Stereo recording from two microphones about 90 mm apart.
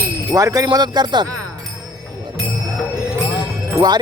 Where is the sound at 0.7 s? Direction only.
50° right (ahead or behind).